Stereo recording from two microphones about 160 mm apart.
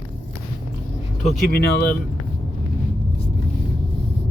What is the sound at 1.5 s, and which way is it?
Speech, 75° left (ahead or behind).